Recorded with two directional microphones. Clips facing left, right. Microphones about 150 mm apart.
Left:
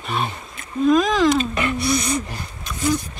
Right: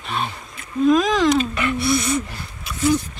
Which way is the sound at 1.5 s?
20° left (ahead or behind).